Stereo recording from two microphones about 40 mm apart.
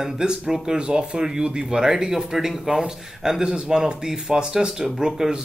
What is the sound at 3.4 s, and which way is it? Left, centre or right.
Speech, right.